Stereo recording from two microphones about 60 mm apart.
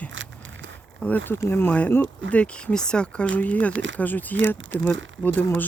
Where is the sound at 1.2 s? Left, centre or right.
Left.